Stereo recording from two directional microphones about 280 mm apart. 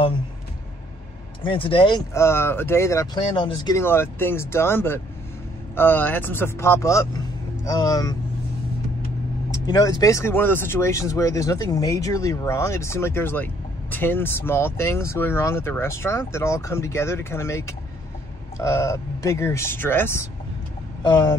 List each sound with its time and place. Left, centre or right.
1.4 s speech: centre
9.7 s speech: centre